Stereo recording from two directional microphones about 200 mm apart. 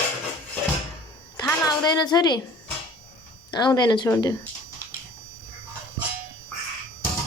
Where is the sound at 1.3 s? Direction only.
20° left (ahead or behind).